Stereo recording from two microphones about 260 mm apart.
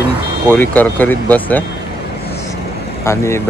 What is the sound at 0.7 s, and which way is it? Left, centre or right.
Speech, centre.